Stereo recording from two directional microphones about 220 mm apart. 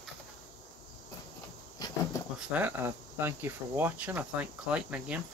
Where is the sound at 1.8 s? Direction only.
20° left (ahead or behind).